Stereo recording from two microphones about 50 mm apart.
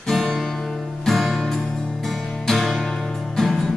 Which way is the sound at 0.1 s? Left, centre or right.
Centre.